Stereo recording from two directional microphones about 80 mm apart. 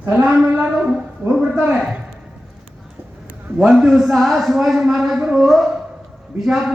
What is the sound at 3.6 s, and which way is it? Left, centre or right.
A man's voice, centre.